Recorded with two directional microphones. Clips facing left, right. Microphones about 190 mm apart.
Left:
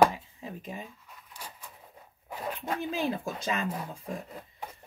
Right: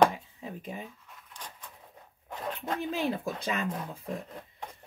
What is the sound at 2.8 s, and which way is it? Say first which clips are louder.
Speech: right 1 dB; 55° right (ahead or behind).